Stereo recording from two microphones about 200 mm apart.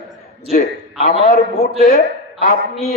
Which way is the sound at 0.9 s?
30° left (ahead or behind).